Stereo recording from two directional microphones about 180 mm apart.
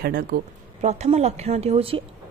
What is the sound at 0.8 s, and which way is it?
A woman's voice, 40° right (ahead or behind).